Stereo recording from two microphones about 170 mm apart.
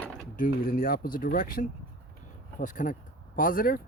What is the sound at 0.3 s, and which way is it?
Speech, 55° left (ahead or behind).